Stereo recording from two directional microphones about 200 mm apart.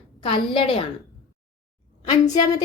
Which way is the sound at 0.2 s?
25° left (ahead or behind).